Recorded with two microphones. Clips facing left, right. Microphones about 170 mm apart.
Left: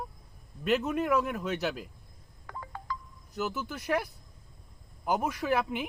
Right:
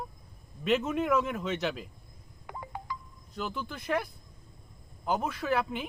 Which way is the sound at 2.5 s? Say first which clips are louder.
Even; 15° right (ahead or behind).